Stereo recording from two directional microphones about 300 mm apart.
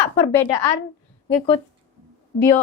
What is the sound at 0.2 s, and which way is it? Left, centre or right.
Speech, centre.